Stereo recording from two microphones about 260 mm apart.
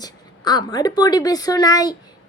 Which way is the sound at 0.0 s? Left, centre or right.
Centre.